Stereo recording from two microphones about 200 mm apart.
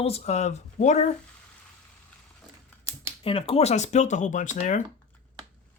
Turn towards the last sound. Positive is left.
turn(degrees=35)  # may be behind; listen again after turning